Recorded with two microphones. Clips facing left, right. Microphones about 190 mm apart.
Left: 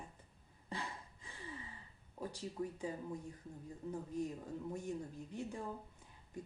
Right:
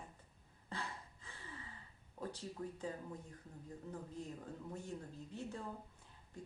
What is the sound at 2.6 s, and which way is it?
Speech, 15° left (ahead or behind).